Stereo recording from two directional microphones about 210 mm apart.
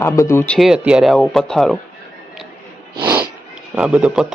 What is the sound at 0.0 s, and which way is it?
Speech, 15° left (ahead or behind).